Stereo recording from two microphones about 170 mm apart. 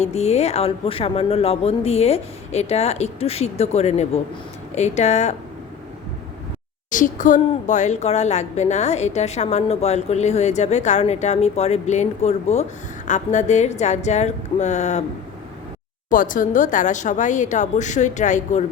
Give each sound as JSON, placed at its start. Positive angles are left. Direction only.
{"t": 0.0, "sound": "a woman's voice", "side_deg": 40}
{"t": 6.9, "sound": "a woman's voice", "side_deg": 50}
{"t": 16.0, "sound": "a woman's voice", "side_deg": 50}